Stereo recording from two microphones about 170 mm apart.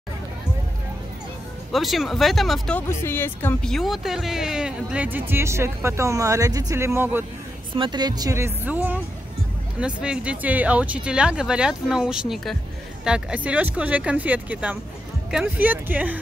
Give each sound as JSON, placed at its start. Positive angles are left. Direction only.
{"t": 1.7, "sound": "speech", "side_deg": 0}
{"t": 2.9, "sound": "speech", "side_deg": 15}
{"t": 3.7, "sound": "speech", "side_deg": 0}
{"t": 7.7, "sound": "speech", "side_deg": -30}
{"t": 9.8, "sound": "speech", "side_deg": -5}